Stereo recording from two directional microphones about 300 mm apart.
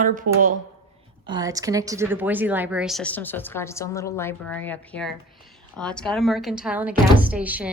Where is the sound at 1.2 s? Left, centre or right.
Centre.